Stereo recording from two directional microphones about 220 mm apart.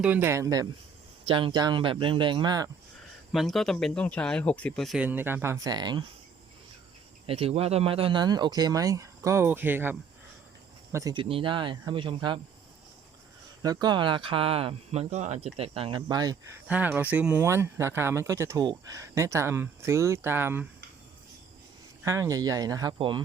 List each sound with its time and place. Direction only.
0.0 s speech: 10° right (ahead or behind)
3.3 s speech: centre (ahead or behind); by 6.1 s 20° right (ahead or behind)
7.3 s speech: 25° right (ahead or behind)
13.8 s speech: 20° right (ahead or behind)
16.6 s speech: 10° right (ahead or behind)
22.0 s speech: 15° right (ahead or behind)